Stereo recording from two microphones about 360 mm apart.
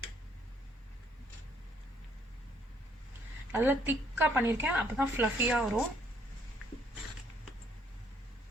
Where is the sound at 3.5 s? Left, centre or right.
Centre.